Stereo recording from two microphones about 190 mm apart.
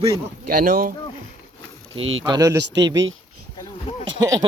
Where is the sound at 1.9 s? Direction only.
90° right.